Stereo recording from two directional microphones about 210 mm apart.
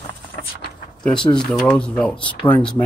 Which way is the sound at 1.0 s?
5° left (ahead or behind).